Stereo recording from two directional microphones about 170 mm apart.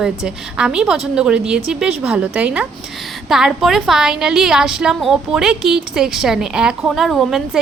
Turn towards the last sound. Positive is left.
turn(degrees=0)  # may be behind; listen again after turning